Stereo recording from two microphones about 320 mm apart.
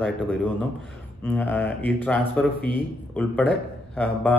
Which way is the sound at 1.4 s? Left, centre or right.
Centre.